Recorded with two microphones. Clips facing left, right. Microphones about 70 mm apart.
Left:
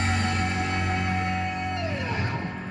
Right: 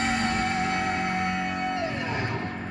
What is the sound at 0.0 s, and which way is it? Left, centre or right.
Music, centre.